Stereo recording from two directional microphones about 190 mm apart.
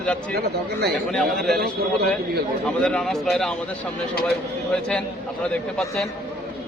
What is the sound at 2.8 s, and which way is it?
Speech, 5° left (ahead or behind).